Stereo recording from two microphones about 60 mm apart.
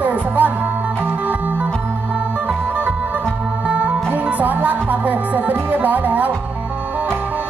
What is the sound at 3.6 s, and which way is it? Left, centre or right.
Music, right.